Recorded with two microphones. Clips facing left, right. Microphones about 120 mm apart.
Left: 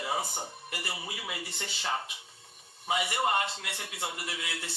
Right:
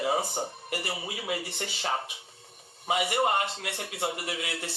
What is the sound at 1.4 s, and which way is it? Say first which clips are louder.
A man's voice: right 3 dB; 50° right (ahead or behind).